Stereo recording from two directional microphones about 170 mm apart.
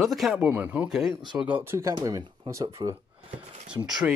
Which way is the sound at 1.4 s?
10° right (ahead or behind).